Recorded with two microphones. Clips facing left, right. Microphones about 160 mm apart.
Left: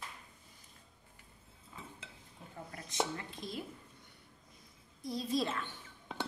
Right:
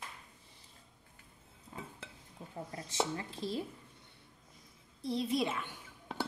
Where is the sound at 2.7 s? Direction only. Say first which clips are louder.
Right 1 dB; 30° right (ahead or behind).